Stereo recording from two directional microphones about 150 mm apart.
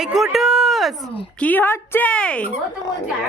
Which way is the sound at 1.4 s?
10° left (ahead or behind).